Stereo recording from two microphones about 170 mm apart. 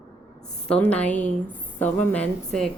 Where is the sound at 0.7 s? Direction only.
5° left (ahead or behind).